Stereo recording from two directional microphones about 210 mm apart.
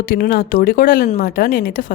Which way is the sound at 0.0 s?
45° left (ahead or behind).